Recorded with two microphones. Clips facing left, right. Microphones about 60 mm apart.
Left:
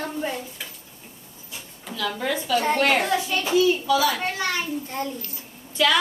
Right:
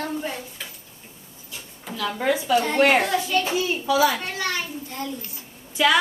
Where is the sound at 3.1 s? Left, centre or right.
Centre.